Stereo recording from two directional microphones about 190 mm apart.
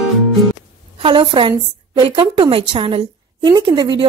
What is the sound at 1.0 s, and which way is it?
A woman's voice, 25° right (ahead or behind).